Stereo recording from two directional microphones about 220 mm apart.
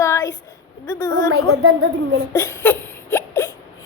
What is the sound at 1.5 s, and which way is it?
Speech, 75° right (ahead or behind).